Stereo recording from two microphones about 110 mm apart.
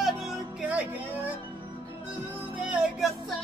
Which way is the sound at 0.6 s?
10° right (ahead or behind).